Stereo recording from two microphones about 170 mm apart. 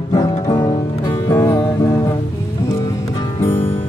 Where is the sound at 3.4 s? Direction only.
35° left (ahead or behind).